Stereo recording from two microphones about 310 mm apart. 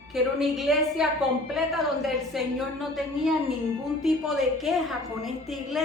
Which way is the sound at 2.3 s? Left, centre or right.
Centre.